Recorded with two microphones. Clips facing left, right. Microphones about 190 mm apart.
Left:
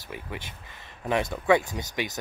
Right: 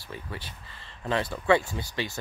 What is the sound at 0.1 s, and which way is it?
Speech, 15° left (ahead or behind).